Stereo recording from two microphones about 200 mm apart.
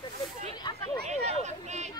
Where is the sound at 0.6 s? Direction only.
25° left (ahead or behind).